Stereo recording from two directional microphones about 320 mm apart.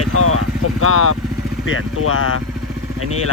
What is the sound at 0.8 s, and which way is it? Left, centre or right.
Speech, left.